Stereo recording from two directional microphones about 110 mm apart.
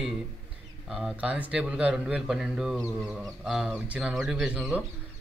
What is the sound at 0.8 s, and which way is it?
Speech, 5° right (ahead or behind).